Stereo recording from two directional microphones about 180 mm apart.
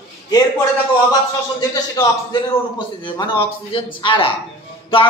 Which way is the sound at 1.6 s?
20° left (ahead or behind).